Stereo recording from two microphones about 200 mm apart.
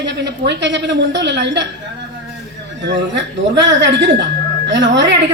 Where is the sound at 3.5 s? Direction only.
60° right (ahead or behind).